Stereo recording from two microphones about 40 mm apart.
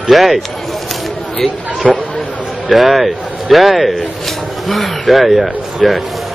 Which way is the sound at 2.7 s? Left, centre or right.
Centre.